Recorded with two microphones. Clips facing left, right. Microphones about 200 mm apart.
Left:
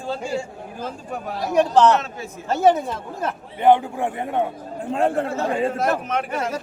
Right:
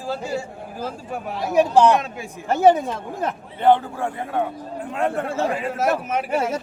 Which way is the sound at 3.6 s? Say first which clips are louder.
Left 1 dB; 15° left (ahead or behind).